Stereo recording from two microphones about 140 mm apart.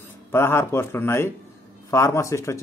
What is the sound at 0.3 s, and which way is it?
A man's voice, 15° left (ahead or behind).